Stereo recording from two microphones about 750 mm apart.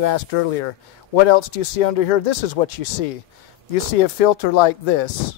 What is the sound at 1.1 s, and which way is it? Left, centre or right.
Speech, left.